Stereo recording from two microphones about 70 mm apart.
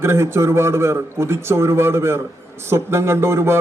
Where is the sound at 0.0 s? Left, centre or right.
Right.